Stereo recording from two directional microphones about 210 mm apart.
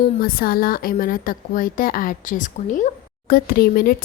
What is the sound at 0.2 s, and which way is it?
A woman's voice, 45° left (ahead or behind).